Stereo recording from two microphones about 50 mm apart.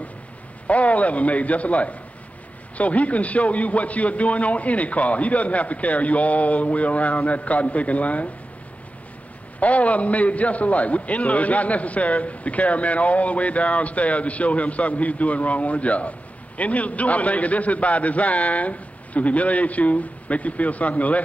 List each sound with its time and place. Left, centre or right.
0.7 s a man's voice: left
9.6 s a man's voice: left